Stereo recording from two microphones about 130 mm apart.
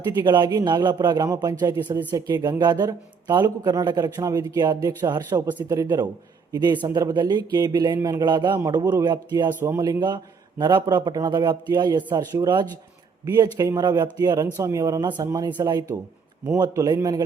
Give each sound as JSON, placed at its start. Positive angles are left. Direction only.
{"t": 0.2, "sound": "speech", "side_deg": -35}
{"t": 9.5, "sound": "speech", "side_deg": -15}
{"t": 9.7, "sound": "a man's voice", "side_deg": -30}